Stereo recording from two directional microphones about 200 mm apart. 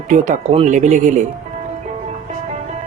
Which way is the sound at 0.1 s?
35° right (ahead or behind).